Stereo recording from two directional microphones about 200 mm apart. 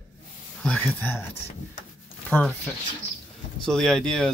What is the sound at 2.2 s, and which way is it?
Speech, 5° left (ahead or behind).